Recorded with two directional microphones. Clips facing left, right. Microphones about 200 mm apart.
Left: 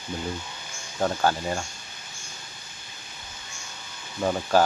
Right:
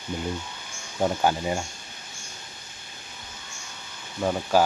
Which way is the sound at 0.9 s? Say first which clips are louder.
Right 1 dB; 15° right (ahead or behind).